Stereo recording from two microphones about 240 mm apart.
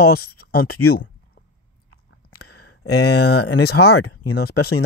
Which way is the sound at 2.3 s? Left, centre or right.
Left.